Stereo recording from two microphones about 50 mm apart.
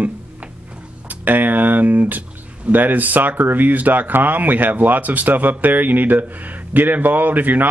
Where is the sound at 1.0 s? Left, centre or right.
Right.